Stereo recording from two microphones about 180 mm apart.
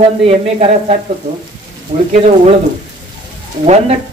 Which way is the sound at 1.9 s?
45° right (ahead or behind).